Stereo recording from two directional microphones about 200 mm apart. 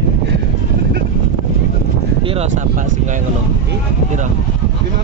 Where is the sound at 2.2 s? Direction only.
35° right (ahead or behind).